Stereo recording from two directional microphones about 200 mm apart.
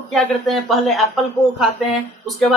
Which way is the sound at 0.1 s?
Centre (ahead or behind).